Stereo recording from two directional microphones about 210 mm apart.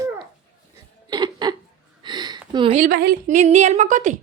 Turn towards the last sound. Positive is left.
turn(degrees=-35)  # may be behind; listen again after turning